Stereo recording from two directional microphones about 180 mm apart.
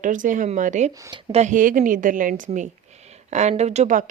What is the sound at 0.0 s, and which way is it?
A woman's voice, 45° right (ahead or behind).